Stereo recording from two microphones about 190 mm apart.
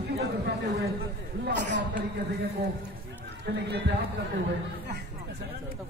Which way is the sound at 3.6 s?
60° right (ahead or behind).